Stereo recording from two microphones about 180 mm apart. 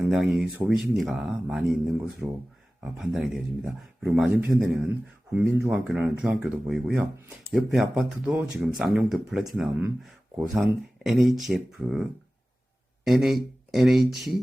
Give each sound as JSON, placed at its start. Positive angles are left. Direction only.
{"t": 0.1, "sound": "speech", "side_deg": -5}
{"t": 13.1, "sound": "speech", "side_deg": 0}